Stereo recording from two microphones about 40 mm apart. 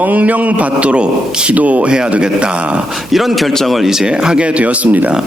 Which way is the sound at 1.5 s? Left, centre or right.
Right.